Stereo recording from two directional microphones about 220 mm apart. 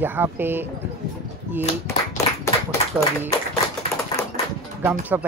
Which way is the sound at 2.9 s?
5° right (ahead or behind).